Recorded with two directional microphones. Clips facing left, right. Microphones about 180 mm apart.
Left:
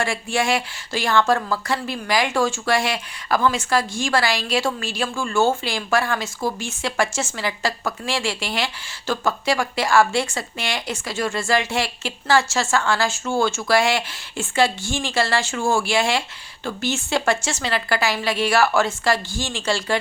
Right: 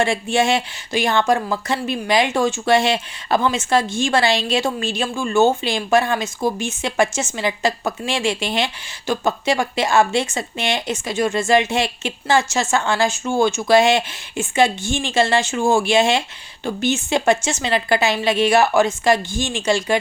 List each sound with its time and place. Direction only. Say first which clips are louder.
0.0 s speech: right 5 dB; 20° right (ahead or behind)